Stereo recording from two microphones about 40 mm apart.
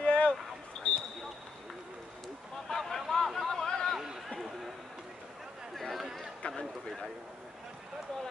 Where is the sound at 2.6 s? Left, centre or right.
Centre.